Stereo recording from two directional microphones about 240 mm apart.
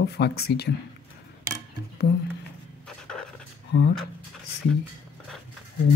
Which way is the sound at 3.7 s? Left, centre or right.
Left.